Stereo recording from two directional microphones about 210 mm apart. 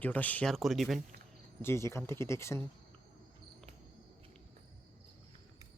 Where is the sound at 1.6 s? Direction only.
10° left (ahead or behind).